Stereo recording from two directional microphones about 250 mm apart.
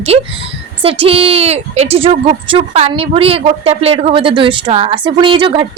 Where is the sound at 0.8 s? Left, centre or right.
Right.